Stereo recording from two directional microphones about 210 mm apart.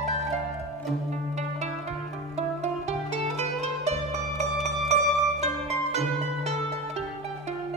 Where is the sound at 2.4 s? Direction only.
30° right (ahead or behind).